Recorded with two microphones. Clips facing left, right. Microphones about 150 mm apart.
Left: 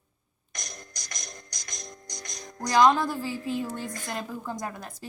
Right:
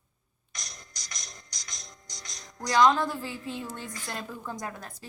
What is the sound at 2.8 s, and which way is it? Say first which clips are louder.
Speech: left 2 dB; 5° left (ahead or behind).